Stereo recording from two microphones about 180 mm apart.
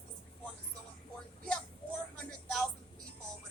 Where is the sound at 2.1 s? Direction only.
5° left (ahead or behind).